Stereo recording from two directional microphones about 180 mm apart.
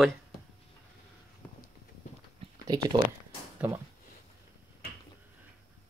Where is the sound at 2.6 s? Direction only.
20° right (ahead or behind).